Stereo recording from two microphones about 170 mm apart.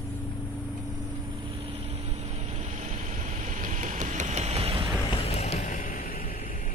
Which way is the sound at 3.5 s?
50° right (ahead or behind).